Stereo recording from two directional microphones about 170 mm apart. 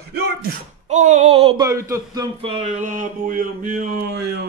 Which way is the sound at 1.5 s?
20° right (ahead or behind).